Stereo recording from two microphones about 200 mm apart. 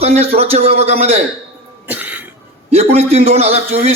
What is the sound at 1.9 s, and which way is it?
Cough, 10° right (ahead or behind).